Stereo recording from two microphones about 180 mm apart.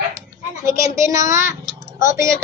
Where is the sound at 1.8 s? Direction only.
15° right (ahead or behind).